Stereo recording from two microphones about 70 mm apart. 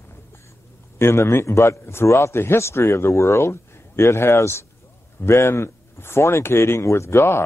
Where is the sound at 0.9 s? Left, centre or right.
Left.